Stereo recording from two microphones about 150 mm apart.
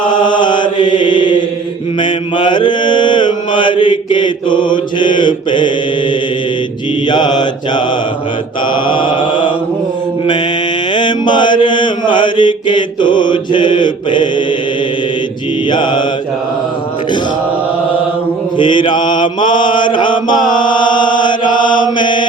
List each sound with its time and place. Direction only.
0.3 s mantra: 30° left (ahead or behind)
7.1 s mantra: 30° left (ahead or behind)
8.9 s mantra: 35° left (ahead or behind)
10.9 s mantra: 30° left (ahead or behind)
15.7 s mantra: 30° left (ahead or behind)
18.5 s mantra: 35° left (ahead or behind)
21.5 s chant: 30° left (ahead or behind)
21.9 s mantra: 30° left (ahead or behind)